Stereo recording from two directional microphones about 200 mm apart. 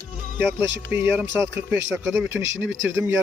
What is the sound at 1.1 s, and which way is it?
Speech, 10° right (ahead or behind).